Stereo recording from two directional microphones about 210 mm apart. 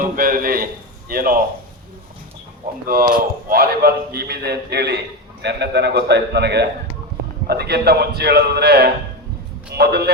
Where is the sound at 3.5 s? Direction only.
45° right (ahead or behind).